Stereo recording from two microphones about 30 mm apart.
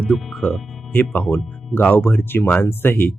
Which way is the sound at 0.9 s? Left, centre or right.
Left.